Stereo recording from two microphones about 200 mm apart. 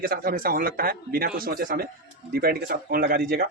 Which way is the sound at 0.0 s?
45° right (ahead or behind).